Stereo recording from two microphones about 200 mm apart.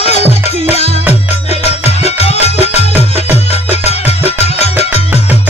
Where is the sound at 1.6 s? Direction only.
30° left (ahead or behind).